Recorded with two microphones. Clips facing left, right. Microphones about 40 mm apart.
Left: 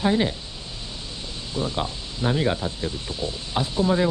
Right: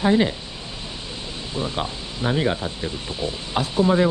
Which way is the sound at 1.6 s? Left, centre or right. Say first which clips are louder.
Even; right.